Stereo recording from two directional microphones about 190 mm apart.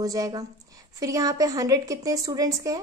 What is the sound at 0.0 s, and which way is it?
A woman's voice, 20° right (ahead or behind).